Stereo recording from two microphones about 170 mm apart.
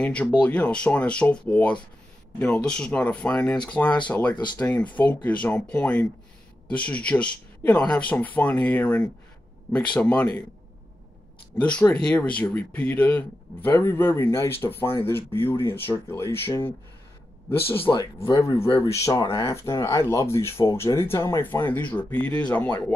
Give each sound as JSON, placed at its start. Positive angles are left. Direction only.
{"t": 0.0, "sound": "speech", "side_deg": 5}
{"t": 11.6, "sound": "speech", "side_deg": 10}